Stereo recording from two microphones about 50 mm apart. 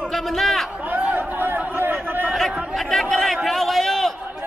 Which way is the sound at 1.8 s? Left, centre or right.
Right.